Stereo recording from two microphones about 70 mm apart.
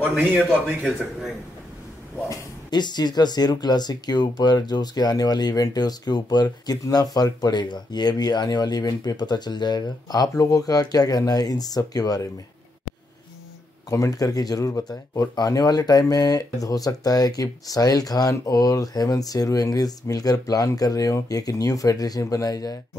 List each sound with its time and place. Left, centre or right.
2.7 s speech: left
13.8 s speech: left